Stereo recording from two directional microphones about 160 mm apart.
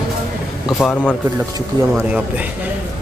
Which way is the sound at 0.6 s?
Centre (ahead or behind).